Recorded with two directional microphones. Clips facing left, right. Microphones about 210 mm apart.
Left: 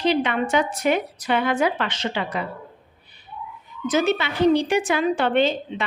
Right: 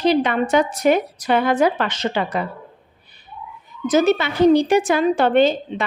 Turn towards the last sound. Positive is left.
turn(degrees=-40)  # may be behind; listen again after turning